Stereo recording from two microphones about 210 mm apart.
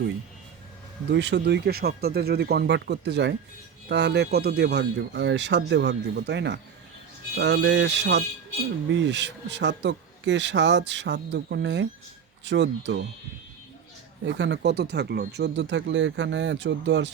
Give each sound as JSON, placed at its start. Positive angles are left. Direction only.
{"t": 1.1, "sound": "speech", "side_deg": -55}
{"t": 14.3, "sound": "speech", "side_deg": -60}